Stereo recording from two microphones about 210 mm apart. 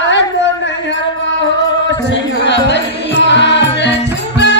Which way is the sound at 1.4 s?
60° left (ahead or behind).